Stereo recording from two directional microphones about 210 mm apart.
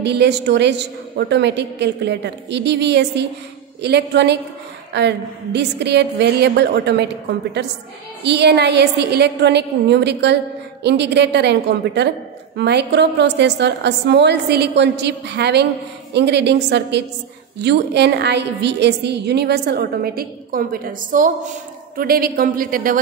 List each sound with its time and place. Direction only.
0.0 s a woman's voice: 55° right (ahead or behind)